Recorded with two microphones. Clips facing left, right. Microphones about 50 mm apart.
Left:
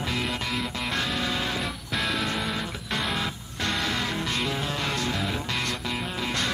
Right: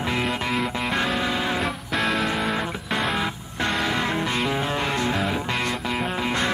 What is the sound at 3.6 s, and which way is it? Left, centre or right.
Music, right.